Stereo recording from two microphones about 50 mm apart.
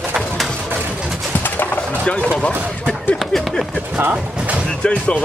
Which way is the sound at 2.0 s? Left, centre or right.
Left.